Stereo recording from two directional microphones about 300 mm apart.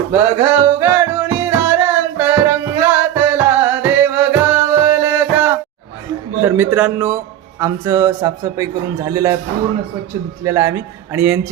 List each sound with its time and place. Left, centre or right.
0.1 s a man's voice: centre
1.5 s music: centre
6.4 s a man's voice: centre
10.4 s a man's voice: centre